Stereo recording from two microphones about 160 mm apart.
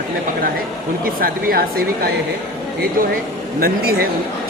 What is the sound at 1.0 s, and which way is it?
Speech, 65° right (ahead or behind).